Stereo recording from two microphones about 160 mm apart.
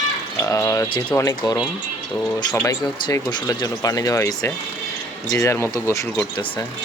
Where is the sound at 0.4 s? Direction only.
20° left (ahead or behind).